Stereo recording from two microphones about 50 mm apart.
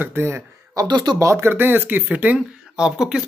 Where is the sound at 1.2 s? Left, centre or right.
Right.